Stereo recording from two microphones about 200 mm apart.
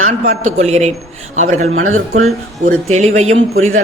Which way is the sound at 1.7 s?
90° right.